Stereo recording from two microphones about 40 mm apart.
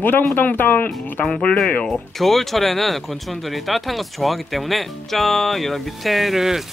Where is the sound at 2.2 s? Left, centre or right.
Centre.